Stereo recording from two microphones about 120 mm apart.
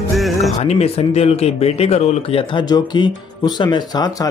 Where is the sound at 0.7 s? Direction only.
60° left (ahead or behind).